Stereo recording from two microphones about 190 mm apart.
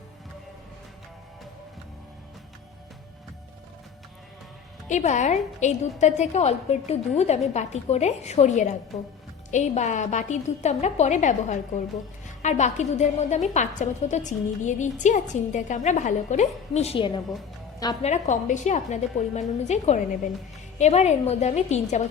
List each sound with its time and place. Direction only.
4.9 s a woman's voice: 40° left (ahead or behind)